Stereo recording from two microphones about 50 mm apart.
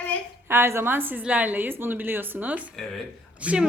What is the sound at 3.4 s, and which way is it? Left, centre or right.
Speech, right.